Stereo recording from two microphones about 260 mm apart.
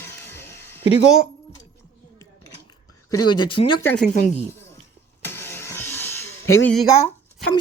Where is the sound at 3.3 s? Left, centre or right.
Centre.